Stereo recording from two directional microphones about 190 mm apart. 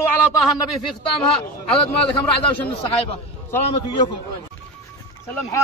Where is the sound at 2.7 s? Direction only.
30° left (ahead or behind).